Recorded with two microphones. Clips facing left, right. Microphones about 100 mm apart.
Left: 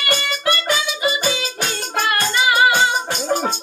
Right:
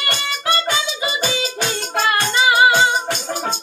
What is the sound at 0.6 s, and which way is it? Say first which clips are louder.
Music: left 2 dB; 25° right (ahead or behind).